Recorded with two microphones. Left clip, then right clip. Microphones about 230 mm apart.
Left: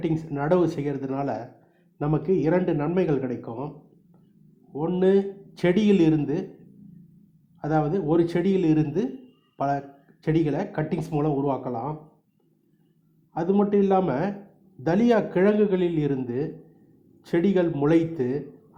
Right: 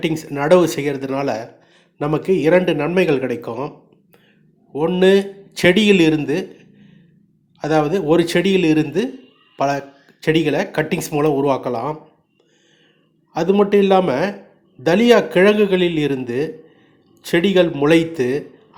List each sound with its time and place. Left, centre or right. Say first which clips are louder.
0.0 s speech: right 7 dB; right
4.7 s speech: right 8 dB; right
7.6 s speech: right 8 dB; right
13.3 s speech: right 8 dB; right